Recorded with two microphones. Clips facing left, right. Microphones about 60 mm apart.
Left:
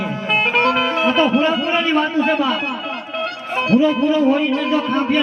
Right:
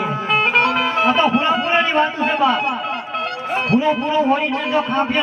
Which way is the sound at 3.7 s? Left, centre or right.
Right.